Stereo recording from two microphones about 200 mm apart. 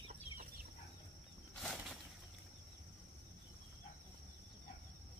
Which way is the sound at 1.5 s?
Centre (ahead or behind).